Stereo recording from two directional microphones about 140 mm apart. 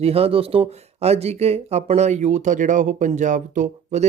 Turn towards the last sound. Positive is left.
turn(degrees=-65)  # may be behind; listen again after turning